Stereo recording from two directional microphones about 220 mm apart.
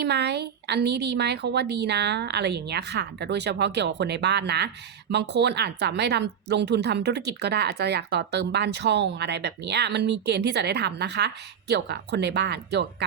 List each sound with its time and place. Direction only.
0.0 s a woman's voice: 50° right (ahead or behind)